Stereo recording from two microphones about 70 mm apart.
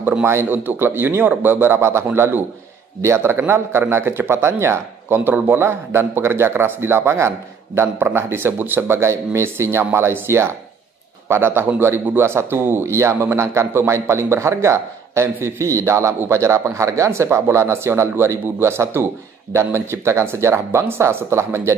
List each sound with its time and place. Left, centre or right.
0.2 s a man's voice: right